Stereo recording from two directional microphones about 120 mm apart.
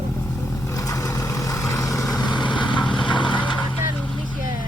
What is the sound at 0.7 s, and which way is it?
Vehicle, 30° left (ahead or behind).